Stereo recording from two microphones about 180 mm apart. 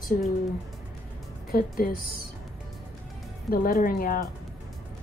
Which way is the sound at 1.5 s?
55° left (ahead or behind).